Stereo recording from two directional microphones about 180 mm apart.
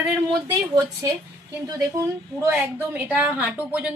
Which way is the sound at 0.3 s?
20° right (ahead or behind).